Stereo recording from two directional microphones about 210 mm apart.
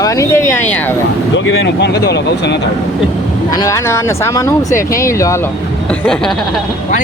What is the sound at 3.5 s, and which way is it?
Speech, 15° left (ahead or behind).